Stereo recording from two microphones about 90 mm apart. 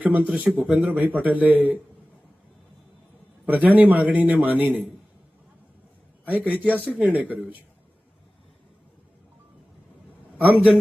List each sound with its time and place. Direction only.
0.0 s a man's voice: 20° right (ahead or behind)
0.9 s a man's voice: 20° right (ahead or behind)
3.4 s a man's voice: 15° right (ahead or behind)
6.2 s a man's voice: 20° right (ahead or behind)
10.3 s a man's voice: 20° right (ahead or behind)